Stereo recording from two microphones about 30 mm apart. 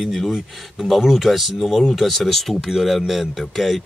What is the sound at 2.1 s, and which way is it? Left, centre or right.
Speech, centre.